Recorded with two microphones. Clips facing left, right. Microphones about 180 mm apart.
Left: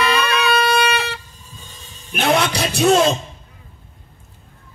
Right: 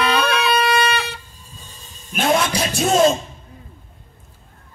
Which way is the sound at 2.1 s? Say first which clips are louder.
Left 1 dB; 70° left (ahead or behind).